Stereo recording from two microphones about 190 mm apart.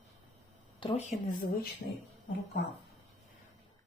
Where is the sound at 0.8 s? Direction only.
35° left (ahead or behind).